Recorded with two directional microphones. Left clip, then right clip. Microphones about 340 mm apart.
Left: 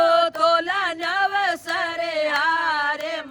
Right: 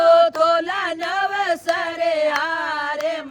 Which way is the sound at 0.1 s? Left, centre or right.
Centre.